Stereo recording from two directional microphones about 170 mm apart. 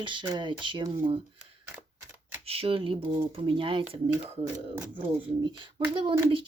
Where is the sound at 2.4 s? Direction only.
35° right (ahead or behind).